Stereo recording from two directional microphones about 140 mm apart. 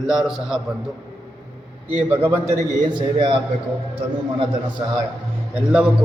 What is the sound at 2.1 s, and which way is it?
Speech, 15° right (ahead or behind).